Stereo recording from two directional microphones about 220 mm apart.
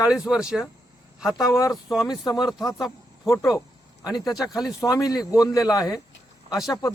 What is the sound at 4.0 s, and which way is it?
Speech, 20° left (ahead or behind).